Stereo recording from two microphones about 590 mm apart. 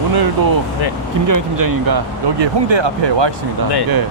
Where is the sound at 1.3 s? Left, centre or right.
Right.